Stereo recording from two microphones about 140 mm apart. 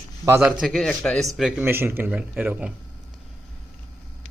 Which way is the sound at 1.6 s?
15° right (ahead or behind).